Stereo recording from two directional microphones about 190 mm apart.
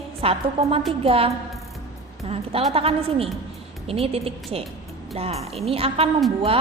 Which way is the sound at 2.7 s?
30° right (ahead or behind).